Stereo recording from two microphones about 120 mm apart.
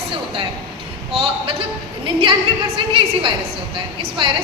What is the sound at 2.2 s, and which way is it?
A woman's voice, 50° right (ahead or behind).